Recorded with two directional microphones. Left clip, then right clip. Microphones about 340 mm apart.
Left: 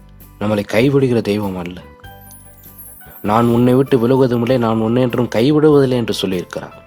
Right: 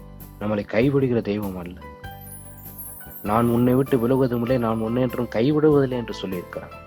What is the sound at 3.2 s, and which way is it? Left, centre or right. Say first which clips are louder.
Speech: left 7 dB; left.